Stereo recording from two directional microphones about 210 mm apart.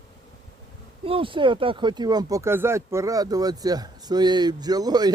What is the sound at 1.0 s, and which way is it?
Speech, 25° right (ahead or behind).